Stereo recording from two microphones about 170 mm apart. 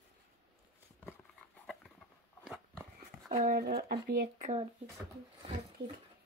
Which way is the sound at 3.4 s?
60° right (ahead or behind).